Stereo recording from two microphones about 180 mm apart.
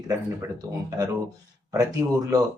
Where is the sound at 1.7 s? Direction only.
20° right (ahead or behind).